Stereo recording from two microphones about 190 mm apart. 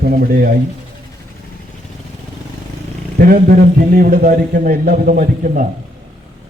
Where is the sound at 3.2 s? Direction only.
45° right (ahead or behind).